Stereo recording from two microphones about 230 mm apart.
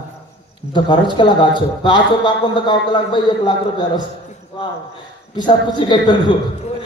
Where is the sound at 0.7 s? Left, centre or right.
Centre.